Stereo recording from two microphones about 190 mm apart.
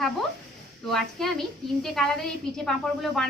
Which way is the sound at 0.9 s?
Centre (ahead or behind).